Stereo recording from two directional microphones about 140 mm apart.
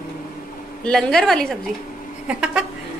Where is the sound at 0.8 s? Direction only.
5° left (ahead or behind).